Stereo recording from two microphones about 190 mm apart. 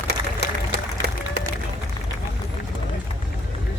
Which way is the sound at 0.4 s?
65° right (ahead or behind).